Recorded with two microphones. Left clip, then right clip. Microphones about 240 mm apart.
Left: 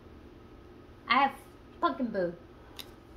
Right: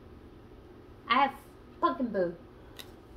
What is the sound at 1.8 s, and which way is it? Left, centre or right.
Speech, centre.